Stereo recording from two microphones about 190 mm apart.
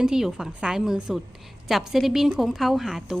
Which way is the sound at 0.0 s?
5° right (ahead or behind).